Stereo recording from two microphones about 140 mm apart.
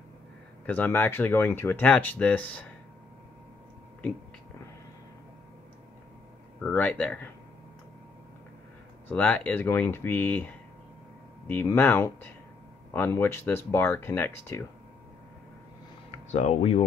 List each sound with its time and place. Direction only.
0.7 s speech: 15° left (ahead or behind)
6.6 s speech: 10° left (ahead or behind)
9.1 s speech: 10° left (ahead or behind)
16.1 s speech: 55° left (ahead or behind)